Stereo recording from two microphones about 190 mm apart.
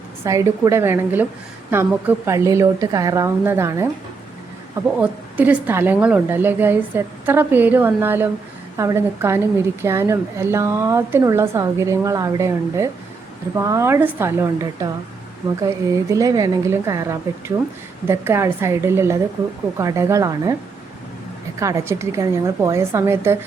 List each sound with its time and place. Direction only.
0.3 s a woman's voice: 15° right (ahead or behind)
4.9 s a woman's voice: 5° right (ahead or behind)
21.6 s a woman's voice: 15° right (ahead or behind)